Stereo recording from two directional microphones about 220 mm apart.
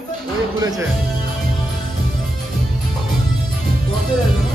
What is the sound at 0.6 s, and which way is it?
Speech, 15° right (ahead or behind).